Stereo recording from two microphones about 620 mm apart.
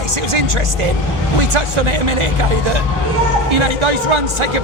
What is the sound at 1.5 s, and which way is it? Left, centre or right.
Speech, right.